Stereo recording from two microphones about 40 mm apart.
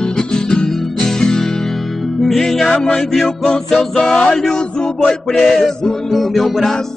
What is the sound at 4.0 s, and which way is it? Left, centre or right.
Music, left.